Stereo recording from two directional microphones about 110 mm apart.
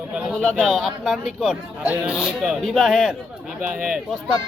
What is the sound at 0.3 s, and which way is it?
Speech, 5° left (ahead or behind).